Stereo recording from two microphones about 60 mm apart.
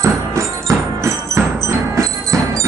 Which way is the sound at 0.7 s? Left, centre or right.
Right.